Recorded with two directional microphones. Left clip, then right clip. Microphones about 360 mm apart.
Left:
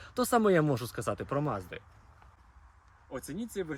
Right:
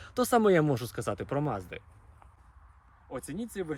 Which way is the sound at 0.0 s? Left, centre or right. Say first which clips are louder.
Right 2 dB; centre.